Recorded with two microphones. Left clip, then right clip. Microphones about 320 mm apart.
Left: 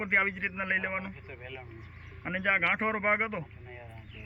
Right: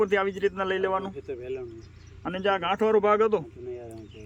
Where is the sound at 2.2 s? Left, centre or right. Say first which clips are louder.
Right 1 dB; right.